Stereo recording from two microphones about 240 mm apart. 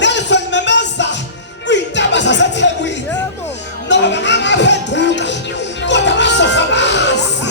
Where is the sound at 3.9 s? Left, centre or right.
Left.